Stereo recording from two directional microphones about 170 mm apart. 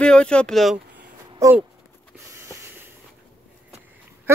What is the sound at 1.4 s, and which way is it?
Speech, 20° right (ahead or behind).